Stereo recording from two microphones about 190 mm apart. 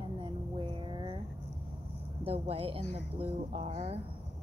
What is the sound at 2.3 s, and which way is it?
Speech, 30° right (ahead or behind).